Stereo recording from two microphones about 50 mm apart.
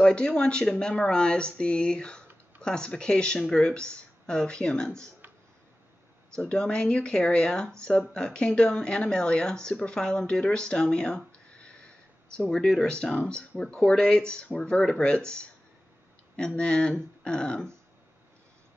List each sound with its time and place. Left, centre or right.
0.0 s speech: centre
6.3 s speech: centre
13.1 s speech: left